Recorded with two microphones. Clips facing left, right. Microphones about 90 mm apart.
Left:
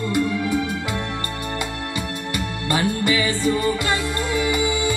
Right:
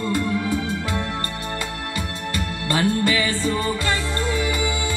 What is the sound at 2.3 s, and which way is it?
Music, 20° left (ahead or behind).